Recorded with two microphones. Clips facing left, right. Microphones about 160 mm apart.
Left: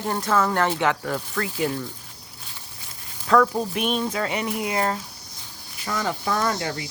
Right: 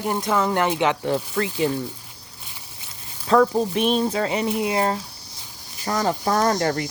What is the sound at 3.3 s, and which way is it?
Speech, 25° right (ahead or behind).